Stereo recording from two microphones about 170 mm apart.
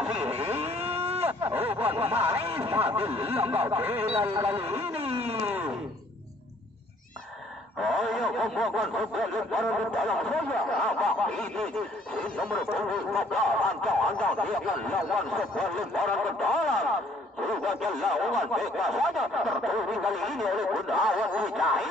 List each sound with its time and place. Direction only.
0.0 s vehicle: 5° right (ahead or behind)
0.3 s vehicle: 35° right (ahead or behind)
1.6 s snicker: 35° right (ahead or behind)
2.4 s speech: 35° right (ahead or behind)
3.6 s speech: 10° right (ahead or behind)
4.5 s speech: 35° right (ahead or behind)
7.8 s speech: centre (ahead or behind)